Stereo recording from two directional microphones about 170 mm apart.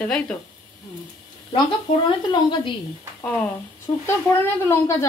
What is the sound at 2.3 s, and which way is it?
Speech, 25° left (ahead or behind).